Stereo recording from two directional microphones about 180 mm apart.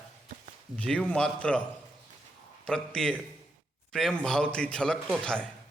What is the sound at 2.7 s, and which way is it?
A man's voice, 5° left (ahead or behind).